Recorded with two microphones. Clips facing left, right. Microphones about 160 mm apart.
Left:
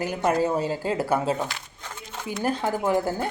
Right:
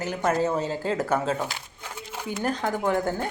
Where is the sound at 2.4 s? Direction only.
10° left (ahead or behind).